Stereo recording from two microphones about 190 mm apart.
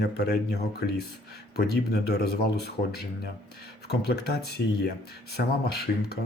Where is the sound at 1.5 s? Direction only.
55° left (ahead or behind).